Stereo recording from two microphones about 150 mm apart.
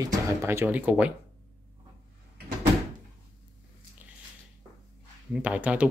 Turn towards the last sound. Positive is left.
turn(degrees=-10)  # may be behind; listen again after turning